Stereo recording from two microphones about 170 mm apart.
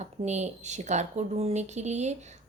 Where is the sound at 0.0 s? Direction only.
40° right (ahead or behind).